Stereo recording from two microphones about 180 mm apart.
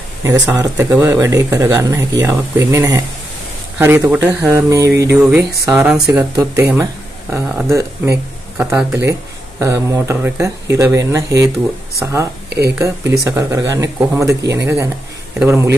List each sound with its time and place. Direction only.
0.2 s speech: 15° right (ahead or behind)
12.4 s a sound: 65° right (ahead or behind)
12.7 s speech: 15° right (ahead or behind)